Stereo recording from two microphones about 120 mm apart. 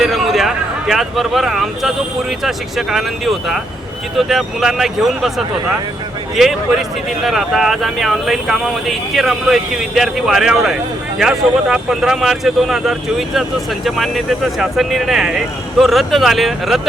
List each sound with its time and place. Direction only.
0.0 s a sound: centre (ahead or behind)
2.4 s speech: centre (ahead or behind)
6.3 s speech: centre (ahead or behind)